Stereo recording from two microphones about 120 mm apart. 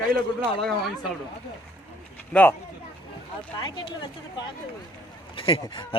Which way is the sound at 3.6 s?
40° left (ahead or behind).